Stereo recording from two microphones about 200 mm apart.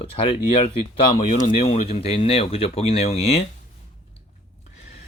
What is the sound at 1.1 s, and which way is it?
Speech, 40° left (ahead or behind).